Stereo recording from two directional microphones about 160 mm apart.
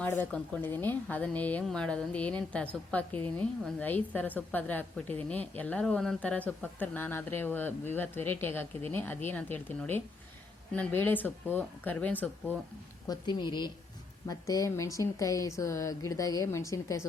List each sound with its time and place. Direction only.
0.0 s a woman's voice: 10° left (ahead or behind)
13.1 s speech: 30° left (ahead or behind)